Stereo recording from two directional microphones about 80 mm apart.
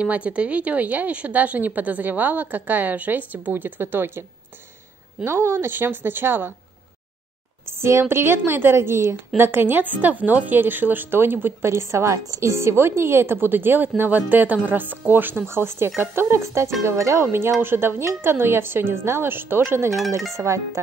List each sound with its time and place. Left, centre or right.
0.0 s a woman's voice: centre
5.2 s a woman's voice: right
7.8 s wind chime: right
9.4 s a woman's voice: right
16.0 s wind chime: right